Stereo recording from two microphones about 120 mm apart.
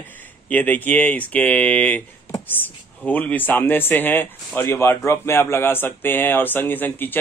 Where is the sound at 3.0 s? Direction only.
15° left (ahead or behind).